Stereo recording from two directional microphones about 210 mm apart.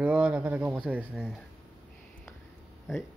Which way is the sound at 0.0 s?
5° right (ahead or behind).